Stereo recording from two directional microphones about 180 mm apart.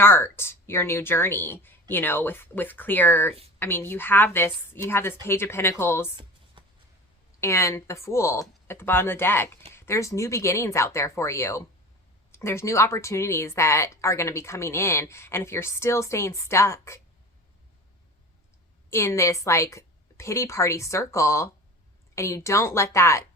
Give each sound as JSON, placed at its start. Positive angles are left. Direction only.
{"t": 0.0, "sound": "speech", "side_deg": 15}
{"t": 6.1, "sound": "a sound", "side_deg": -30}
{"t": 7.4, "sound": "speech", "side_deg": 15}
{"t": 18.9, "sound": "speech", "side_deg": 15}